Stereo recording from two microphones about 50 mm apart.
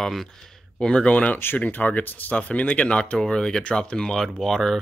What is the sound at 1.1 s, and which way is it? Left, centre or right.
Speech, left.